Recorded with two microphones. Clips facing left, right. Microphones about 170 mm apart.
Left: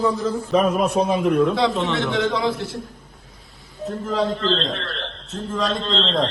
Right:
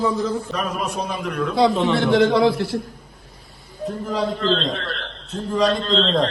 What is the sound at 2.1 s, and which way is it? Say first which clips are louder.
Speech: right 8 dB; 65° right (ahead or behind).